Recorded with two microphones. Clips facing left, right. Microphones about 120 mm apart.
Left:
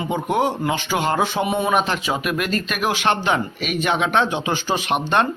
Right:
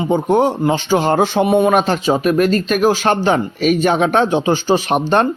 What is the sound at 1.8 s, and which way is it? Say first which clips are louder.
Speech: right 8 dB; 35° right (ahead or behind).